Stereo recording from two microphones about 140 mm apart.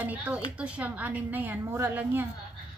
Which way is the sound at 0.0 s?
10° right (ahead or behind).